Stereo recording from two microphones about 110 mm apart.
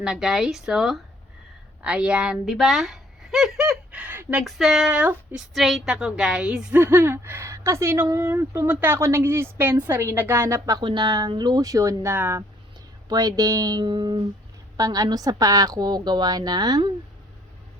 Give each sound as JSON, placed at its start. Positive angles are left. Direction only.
{"t": 0.0, "sound": "a woman's voice", "side_deg": -5}
{"t": 4.0, "sound": "speech", "side_deg": -15}
{"t": 4.4, "sound": "speech", "side_deg": 0}
{"t": 6.7, "sound": "speech", "side_deg": -20}
{"t": 10.8, "sound": "a woman's voice", "side_deg": -40}
{"t": 13.1, "sound": "a woman's voice", "side_deg": -35}
{"t": 14.8, "sound": "a woman's voice", "side_deg": -30}